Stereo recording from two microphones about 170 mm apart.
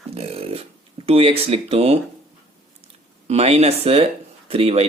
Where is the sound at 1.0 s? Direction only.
35° right (ahead or behind).